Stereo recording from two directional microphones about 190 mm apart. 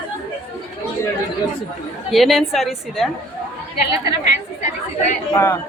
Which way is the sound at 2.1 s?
Centre (ahead or behind).